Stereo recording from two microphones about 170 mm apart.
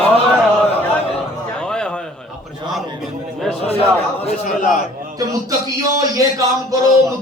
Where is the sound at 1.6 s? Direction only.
5° left (ahead or behind).